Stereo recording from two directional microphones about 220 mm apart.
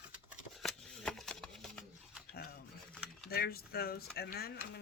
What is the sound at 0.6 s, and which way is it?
Scissors, centre (ahead or behind).